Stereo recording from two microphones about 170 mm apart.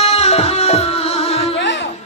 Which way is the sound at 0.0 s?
35° left (ahead or behind).